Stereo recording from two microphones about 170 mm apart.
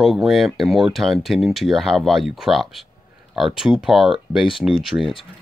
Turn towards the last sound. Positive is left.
turn(degrees=0)  # may be behind; listen again after turning